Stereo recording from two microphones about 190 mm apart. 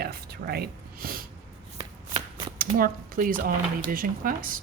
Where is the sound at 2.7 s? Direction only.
50° right (ahead or behind).